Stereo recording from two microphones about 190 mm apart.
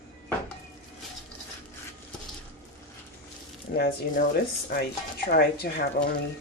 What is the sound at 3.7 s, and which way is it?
Speech, 55° left (ahead or behind).